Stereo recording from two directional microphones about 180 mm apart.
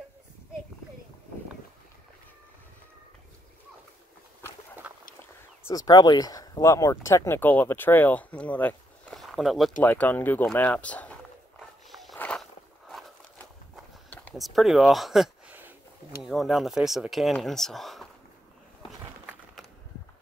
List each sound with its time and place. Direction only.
5.7 s speech: 20° left (ahead or behind)
11.9 s walk: centre (ahead or behind)
14.1 s speech: 5° left (ahead or behind)
18.9 s walk: centre (ahead or behind)